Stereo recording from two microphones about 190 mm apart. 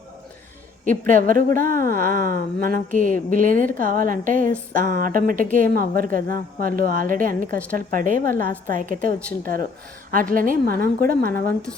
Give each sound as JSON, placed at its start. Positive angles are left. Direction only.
{"t": 0.9, "sound": "a woman's voice", "side_deg": -45}